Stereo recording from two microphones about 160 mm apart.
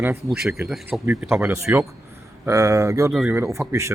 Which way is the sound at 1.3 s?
15° right (ahead or behind).